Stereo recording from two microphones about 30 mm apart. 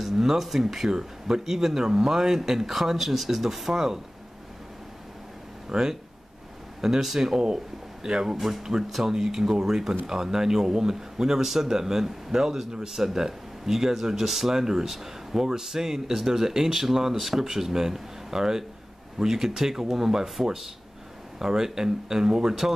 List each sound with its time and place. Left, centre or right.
0.0 s speech: centre
2.6 s speech: centre
5.7 s speech: centre